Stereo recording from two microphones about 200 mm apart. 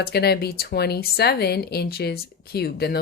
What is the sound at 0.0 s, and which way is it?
Speech, 50° left (ahead or behind).